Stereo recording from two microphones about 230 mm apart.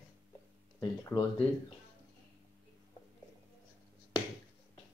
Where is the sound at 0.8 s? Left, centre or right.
Centre.